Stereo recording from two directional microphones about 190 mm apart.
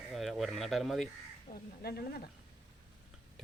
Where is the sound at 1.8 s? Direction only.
55° left (ahead or behind).